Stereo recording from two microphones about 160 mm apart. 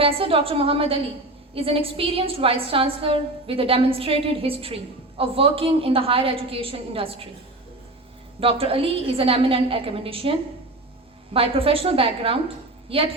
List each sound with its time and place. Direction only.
0.0 s a woman's voice: 35° right (ahead or behind)
8.4 s a woman's voice: 35° right (ahead or behind)
11.3 s a woman's voice: 35° right (ahead or behind)